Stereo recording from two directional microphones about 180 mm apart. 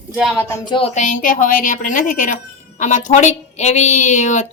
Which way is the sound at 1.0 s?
45° left (ahead or behind).